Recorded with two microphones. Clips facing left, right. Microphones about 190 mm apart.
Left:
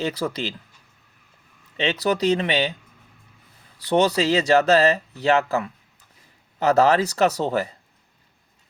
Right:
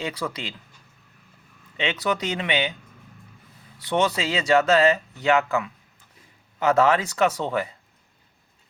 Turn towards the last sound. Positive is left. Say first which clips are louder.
# left 2 dB
turn(degrees=40)  # may be behind; listen again after turning